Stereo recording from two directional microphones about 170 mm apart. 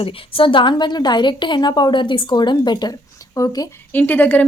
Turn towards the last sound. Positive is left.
turn(degrees=10)  # may be behind; listen again after turning